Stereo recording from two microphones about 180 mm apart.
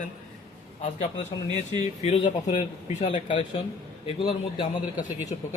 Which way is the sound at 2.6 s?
40° left (ahead or behind).